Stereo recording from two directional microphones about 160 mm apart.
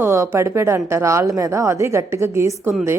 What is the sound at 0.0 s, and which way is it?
A woman's voice, 15° right (ahead or behind).